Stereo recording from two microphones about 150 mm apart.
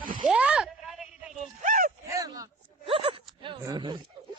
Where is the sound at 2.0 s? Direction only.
25° right (ahead or behind).